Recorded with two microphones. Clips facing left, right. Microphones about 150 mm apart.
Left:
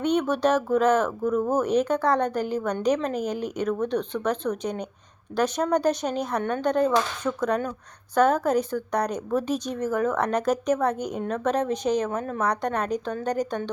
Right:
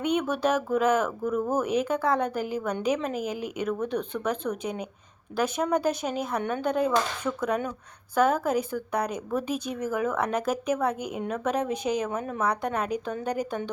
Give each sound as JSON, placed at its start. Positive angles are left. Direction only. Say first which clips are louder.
{"t": 0.0, "sound": "a woman's voice", "louder": "left 3 dB", "side_deg": -5}